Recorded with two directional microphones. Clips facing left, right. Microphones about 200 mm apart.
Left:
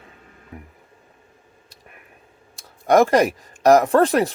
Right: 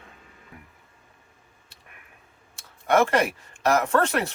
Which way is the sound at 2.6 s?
35° left (ahead or behind).